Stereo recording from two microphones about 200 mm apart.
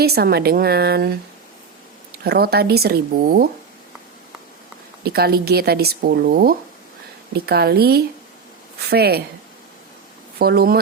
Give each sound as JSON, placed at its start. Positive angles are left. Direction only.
{"t": 0.0, "sound": "speech", "side_deg": -50}
{"t": 2.2, "sound": "speech", "side_deg": -50}
{"t": 5.0, "sound": "speech", "side_deg": -50}
{"t": 10.3, "sound": "speech", "side_deg": -50}